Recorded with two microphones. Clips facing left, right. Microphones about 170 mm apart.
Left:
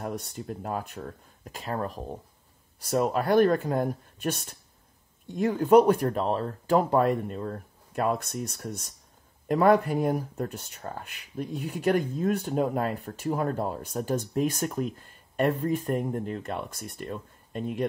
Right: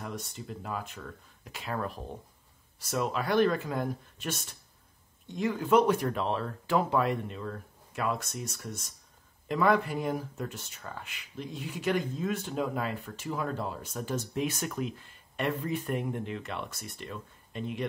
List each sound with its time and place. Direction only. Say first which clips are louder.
0.3 s speech: left 5 dB; 50° left (ahead or behind)